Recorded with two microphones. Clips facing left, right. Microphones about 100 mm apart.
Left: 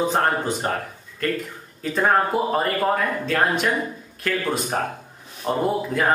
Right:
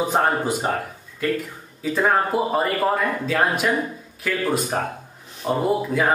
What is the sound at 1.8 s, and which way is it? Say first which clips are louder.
Speech: even; centre (ahead or behind).